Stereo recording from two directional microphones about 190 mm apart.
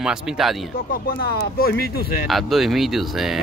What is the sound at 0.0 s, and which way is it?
Speech, centre (ahead or behind).